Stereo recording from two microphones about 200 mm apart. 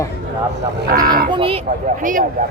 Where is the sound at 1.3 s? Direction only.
25° right (ahead or behind).